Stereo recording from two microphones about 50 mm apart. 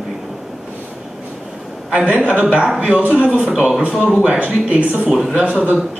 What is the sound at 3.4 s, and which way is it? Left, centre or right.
Speech, centre.